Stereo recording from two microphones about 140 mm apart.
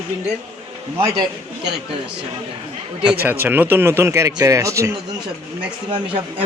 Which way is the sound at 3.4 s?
15° right (ahead or behind).